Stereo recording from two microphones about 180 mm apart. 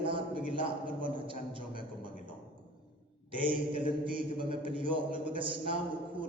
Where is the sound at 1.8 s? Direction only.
25° right (ahead or behind).